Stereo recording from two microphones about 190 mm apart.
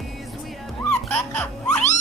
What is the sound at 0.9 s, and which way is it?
Music, 5° left (ahead or behind).